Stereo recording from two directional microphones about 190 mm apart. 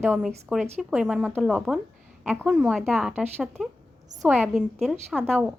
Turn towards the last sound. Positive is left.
turn(degrees=5)  # may be behind; listen again after turning